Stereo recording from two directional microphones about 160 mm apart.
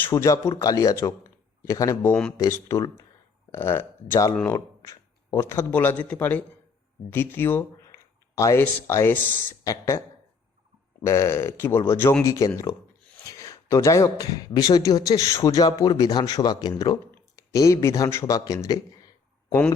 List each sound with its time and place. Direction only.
0.0 s speech: 20° left (ahead or behind)
11.0 s speech: 20° left (ahead or behind)